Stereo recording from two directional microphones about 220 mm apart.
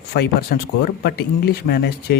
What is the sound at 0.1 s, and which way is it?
Speech, 45° left (ahead or behind).